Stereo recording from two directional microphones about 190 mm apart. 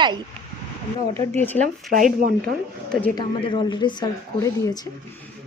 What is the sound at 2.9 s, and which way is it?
Speech, 10° left (ahead or behind).